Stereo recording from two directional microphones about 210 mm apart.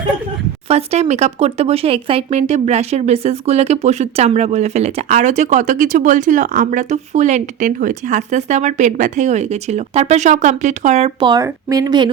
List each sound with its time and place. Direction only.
0.7 s speech: 30° right (ahead or behind)